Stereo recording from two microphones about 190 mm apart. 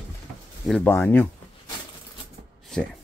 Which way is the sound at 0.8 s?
10° left (ahead or behind).